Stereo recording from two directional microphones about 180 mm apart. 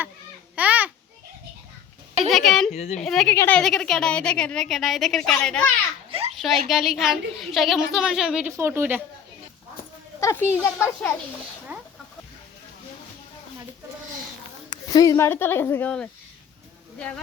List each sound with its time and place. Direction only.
0.5 s babbling: 10° right (ahead or behind)
2.3 s a woman's voice: centre (ahead or behind)
2.7 s speech: 35° left (ahead or behind)
3.0 s a woman's voice: centre (ahead or behind)
3.3 s a woman's voice: 10° left (ahead or behind)
6.1 s a sound: 30° right (ahead or behind)
6.3 s a woman's voice: centre (ahead or behind)
10.2 s speech: 15° left (ahead or behind)
11.7 s chicken: 10° right (ahead or behind)
14.7 s speech: 20° left (ahead or behind)